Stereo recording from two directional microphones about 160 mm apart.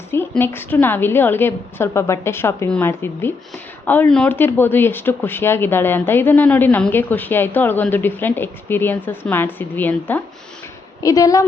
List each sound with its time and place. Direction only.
0.1 s speech: 15° left (ahead or behind)
11.0 s a woman's voice: 20° left (ahead or behind)